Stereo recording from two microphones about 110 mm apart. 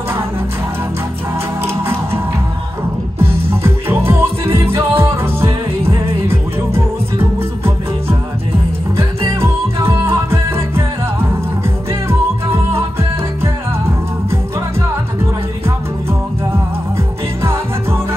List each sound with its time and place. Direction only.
3.2 s music: 20° right (ahead or behind)
8.9 s music: 25° right (ahead or behind)